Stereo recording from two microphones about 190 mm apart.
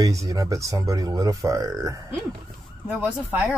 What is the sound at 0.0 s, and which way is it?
Speech, 15° right (ahead or behind).